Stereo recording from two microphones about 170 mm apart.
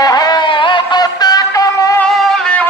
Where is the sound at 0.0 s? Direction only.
20° left (ahead or behind).